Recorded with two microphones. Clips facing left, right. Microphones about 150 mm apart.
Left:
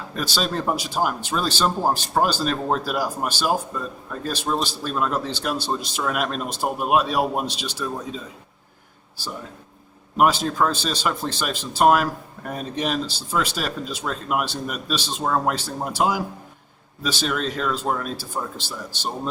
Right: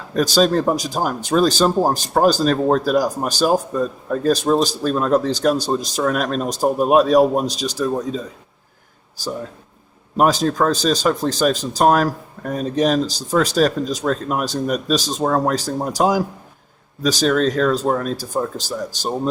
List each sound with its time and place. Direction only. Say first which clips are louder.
0.2 s speech: right 10 dB; 40° right (ahead or behind)
10.2 s speech: right 3 dB; 40° right (ahead or behind)